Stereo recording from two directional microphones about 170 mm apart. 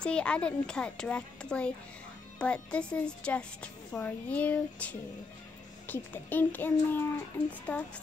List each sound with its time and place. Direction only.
0.0 s a child's voice: 5° left (ahead or behind)